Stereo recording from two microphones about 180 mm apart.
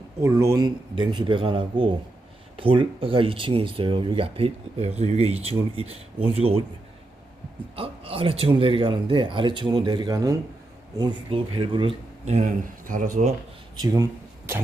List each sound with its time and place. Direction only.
0.2 s speech: 15° right (ahead or behind); by 6.6 s 35° right (ahead or behind)
7.8 s speech: 30° right (ahead or behind)
13.7 s speech: 20° right (ahead or behind)